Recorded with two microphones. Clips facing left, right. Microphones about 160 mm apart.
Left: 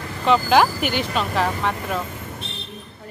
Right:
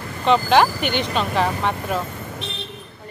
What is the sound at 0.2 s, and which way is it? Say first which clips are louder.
Speech: right 1 dB; 5° left (ahead or behind).